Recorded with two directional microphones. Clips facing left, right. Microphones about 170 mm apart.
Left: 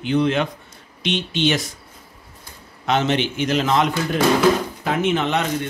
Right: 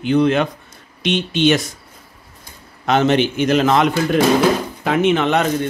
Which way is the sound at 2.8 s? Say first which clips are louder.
Right 5 dB; 50° right (ahead or behind).